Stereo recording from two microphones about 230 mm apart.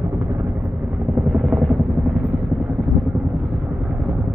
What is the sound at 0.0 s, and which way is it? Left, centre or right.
Helicopter, centre.